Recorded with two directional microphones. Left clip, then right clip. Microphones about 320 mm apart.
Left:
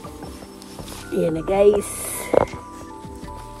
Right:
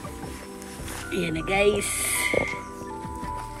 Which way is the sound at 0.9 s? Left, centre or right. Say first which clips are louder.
Left 6 dB; centre.